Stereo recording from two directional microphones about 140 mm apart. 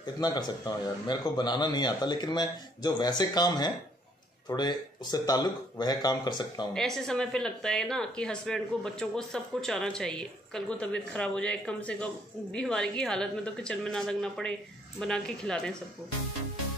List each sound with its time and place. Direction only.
0.0 s a man's voice: 30° left (ahead or behind)
6.7 s speech: 5° left (ahead or behind)